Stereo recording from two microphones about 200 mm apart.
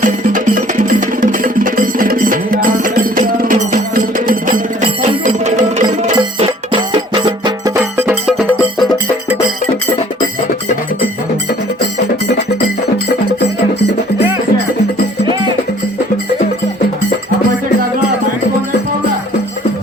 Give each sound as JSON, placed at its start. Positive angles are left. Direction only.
{"t": 0.0, "sound": "music", "side_deg": -40}
{"t": 6.1, "sound": "music", "side_deg": -25}
{"t": 7.8, "sound": "music", "side_deg": -10}